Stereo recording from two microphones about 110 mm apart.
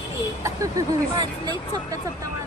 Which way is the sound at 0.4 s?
30° right (ahead or behind).